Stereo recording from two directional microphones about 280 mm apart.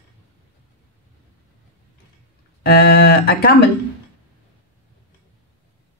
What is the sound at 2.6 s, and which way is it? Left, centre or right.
Speech, left.